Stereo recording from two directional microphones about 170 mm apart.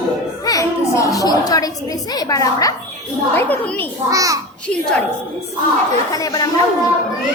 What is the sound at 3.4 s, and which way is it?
Speech, 10° left (ahead or behind).